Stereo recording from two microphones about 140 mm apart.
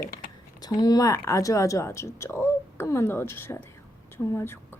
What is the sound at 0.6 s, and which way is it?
Speech, 30° left (ahead or behind).